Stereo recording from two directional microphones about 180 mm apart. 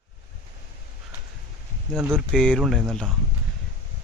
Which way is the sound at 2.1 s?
5° left (ahead or behind).